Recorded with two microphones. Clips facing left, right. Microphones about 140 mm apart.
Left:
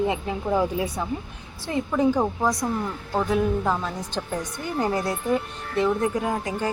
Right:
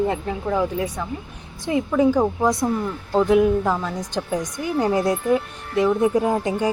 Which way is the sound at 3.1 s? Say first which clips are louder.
Right 6 dB; 15° right (ahead or behind).